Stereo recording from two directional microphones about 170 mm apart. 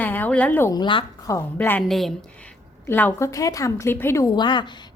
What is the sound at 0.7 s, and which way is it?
Speech, 30° left (ahead or behind).